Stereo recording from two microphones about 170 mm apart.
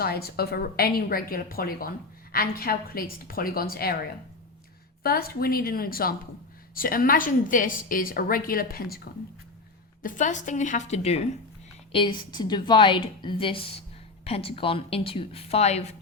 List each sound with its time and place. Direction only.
0.0 s a woman's voice: 65° left (ahead or behind)
5.0 s a woman's voice: 60° left (ahead or behind)
10.0 s a woman's voice: 50° left (ahead or behind)